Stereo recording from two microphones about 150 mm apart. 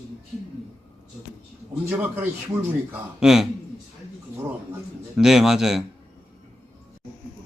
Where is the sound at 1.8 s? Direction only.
10° right (ahead or behind).